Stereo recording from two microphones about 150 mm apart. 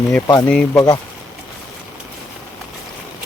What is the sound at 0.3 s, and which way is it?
Speech, 15° left (ahead or behind).